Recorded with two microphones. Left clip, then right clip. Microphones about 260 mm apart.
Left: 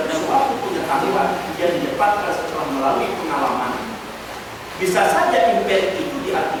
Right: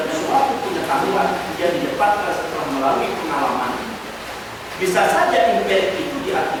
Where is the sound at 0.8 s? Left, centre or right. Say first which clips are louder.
Even; centre.